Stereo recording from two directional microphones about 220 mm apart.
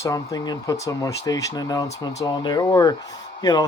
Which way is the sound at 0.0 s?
15° left (ahead or behind).